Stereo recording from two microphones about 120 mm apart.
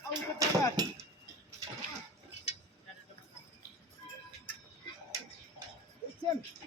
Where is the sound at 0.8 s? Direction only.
35° right (ahead or behind).